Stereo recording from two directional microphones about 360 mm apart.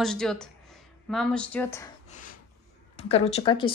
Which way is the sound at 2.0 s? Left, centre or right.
Left.